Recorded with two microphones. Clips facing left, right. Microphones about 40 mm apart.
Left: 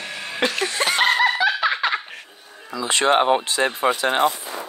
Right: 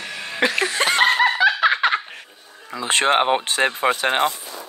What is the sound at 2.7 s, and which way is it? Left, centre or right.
Speech, right.